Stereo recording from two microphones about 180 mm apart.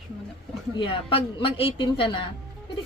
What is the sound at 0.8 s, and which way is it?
Speech, 30° left (ahead or behind).